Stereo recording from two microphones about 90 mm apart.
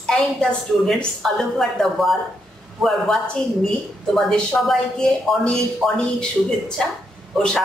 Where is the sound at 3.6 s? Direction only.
5° left (ahead or behind).